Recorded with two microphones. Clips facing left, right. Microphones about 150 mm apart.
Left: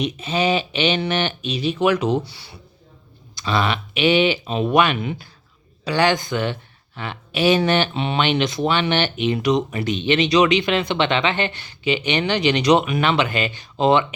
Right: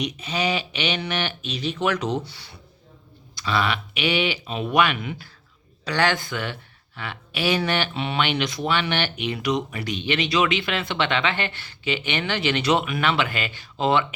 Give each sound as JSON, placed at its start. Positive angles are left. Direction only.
{"t": 0.0, "sound": "speech", "side_deg": 25}
{"t": 1.5, "sound": "speech", "side_deg": 15}
{"t": 3.3, "sound": "speech", "side_deg": 25}